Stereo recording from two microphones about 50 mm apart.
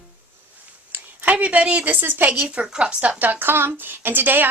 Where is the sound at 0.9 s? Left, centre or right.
Right.